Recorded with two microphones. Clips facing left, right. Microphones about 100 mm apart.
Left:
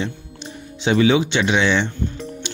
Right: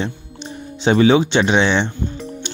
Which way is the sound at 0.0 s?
35° right (ahead or behind).